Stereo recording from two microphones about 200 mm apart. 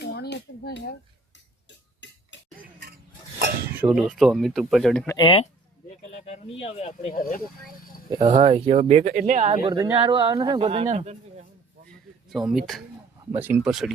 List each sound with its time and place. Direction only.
0.0 s a sound: 50° left (ahead or behind)
2.0 s a sound: 65° left (ahead or behind)
3.7 s speech: 5° right (ahead or behind)
5.0 s speech: 20° left (ahead or behind)
6.6 s speech: 30° left (ahead or behind)
8.2 s speech: 30° right (ahead or behind)
9.0 s speech: 45° right (ahead or behind)
9.6 s speech: 20° right (ahead or behind)
12.3 s speech: centre (ahead or behind)